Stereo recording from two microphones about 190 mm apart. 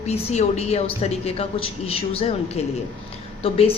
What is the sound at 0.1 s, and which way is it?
A woman's voice, 35° left (ahead or behind).